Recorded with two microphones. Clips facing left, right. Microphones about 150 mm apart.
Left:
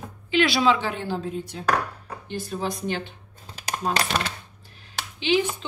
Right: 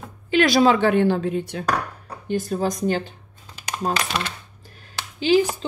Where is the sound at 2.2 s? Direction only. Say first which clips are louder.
Right 6 dB; 45° right (ahead or behind).